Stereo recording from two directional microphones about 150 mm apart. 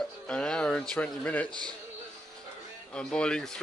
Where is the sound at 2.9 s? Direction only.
5° left (ahead or behind).